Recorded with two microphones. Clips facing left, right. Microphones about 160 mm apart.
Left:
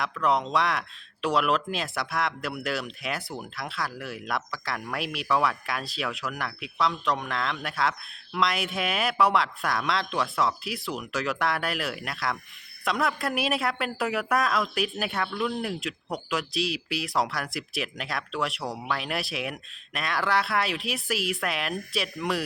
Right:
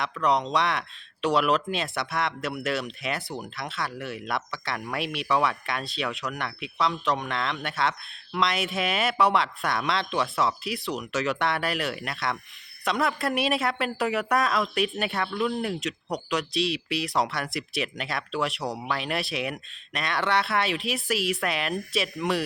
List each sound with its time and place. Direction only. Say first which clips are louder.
0.0 s speech: right 1 dB; centre (ahead or behind)